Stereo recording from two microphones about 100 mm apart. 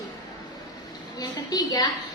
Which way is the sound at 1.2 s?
40° left (ahead or behind).